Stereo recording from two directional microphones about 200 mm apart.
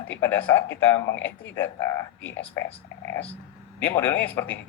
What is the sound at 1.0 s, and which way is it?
Speech, 65° left (ahead or behind).